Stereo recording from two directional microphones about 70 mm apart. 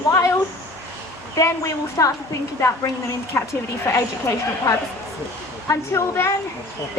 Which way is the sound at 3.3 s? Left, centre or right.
Left.